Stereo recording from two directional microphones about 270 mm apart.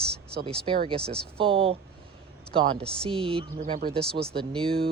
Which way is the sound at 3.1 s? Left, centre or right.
Centre.